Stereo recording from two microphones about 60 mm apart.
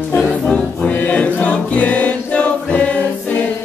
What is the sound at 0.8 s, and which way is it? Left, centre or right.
Music, left.